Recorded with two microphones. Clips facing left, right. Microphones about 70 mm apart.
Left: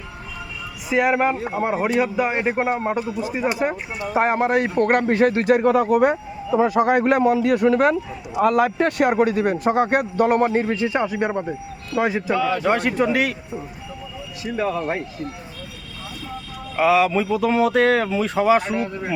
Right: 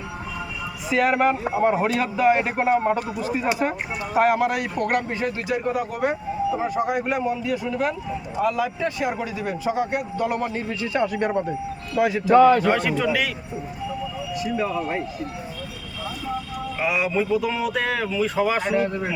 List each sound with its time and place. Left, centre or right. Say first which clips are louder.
0.9 s a man's voice: left 1 dB; centre
4.1 s a man's voice: left 1 dB; left
6.6 s a man's voice: left 7 dB; left
10.8 s a man's voice: left 1 dB; left
12.4 s a man's voice: right 11 dB; right
13.0 s a man's voice: left 3 dB; left
14.5 s a man's voice: left 4 dB; left
16.8 s a man's voice: left 6 dB; left